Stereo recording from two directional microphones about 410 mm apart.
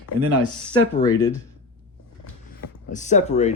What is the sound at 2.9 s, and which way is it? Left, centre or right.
Speech, centre.